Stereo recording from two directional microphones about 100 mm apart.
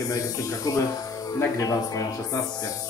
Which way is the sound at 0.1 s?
40° left (ahead or behind).